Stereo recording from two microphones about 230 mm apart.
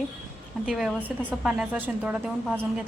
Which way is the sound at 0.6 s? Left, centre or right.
Centre.